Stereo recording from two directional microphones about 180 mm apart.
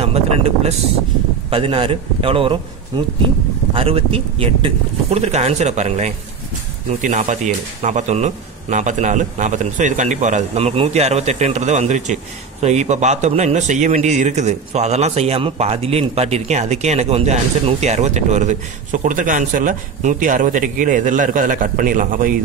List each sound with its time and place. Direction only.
0.0 s a man's voice: 35° right (ahead or behind)